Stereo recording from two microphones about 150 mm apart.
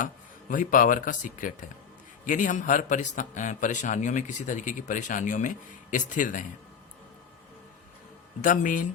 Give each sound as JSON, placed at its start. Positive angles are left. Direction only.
{"t": 0.0, "sound": "a man's voice", "side_deg": 60}
{"t": 8.4, "sound": "a man's voice", "side_deg": 65}